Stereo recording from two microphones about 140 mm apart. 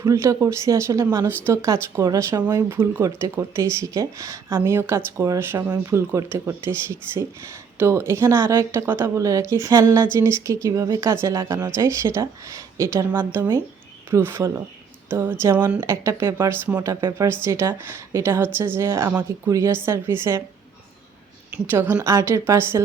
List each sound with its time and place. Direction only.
0.0 s a woman's voice: 20° right (ahead or behind)
21.7 s a woman's voice: 15° right (ahead or behind)